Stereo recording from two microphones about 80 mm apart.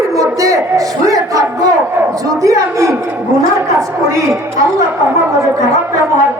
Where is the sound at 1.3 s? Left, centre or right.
Right.